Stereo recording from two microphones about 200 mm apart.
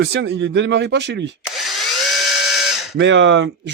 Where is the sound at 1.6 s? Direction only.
Centre (ahead or behind).